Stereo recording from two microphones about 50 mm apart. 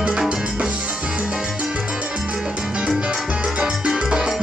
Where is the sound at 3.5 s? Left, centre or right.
Centre.